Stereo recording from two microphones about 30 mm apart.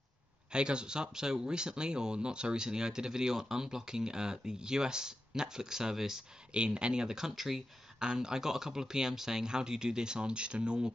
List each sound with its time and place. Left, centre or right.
0.5 s speech: right
6.5 s speech: right; by 7.3 s centre
7.3 s speech: centre
8.0 s speech: right